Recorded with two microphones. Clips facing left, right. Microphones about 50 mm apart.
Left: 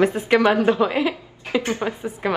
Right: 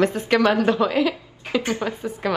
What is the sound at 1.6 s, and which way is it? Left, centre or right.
Speech, left.